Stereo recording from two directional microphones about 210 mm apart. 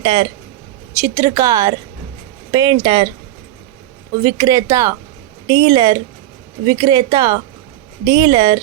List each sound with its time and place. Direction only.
0.0 s speech: 20° right (ahead or behind)
4.2 s speech: 15° right (ahead or behind)